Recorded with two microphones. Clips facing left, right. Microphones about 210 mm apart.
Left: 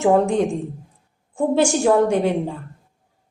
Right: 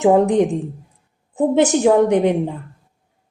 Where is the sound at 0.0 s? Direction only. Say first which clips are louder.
Right 3 dB; 20° right (ahead or behind).